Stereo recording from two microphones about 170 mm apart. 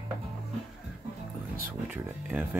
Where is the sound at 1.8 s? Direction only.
10° right (ahead or behind).